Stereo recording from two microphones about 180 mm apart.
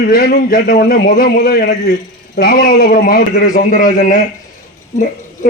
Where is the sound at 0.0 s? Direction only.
55° left (ahead or behind).